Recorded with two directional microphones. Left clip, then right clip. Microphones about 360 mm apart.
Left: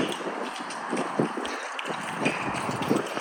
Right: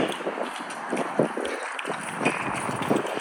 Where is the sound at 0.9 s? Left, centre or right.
Centre.